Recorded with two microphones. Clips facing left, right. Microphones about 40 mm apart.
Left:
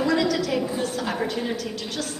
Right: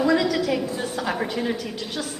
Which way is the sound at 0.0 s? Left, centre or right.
Centre.